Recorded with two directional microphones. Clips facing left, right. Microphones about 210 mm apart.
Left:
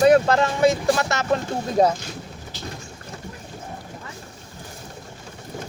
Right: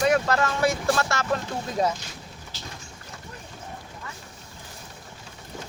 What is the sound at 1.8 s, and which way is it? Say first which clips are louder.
Speech: left 7 dB; 35° left (ahead or behind).